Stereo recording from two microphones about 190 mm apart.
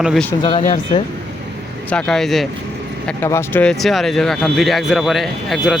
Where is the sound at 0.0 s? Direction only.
Centre (ahead or behind).